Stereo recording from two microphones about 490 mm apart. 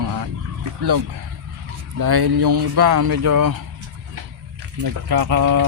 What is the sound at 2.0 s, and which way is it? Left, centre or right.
Speech, right.